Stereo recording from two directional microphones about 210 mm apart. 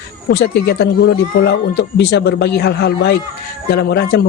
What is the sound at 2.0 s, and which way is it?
A man's voice, 50° left (ahead or behind).